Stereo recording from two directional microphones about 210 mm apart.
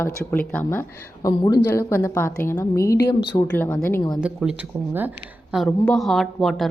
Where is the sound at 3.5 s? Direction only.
10° left (ahead or behind).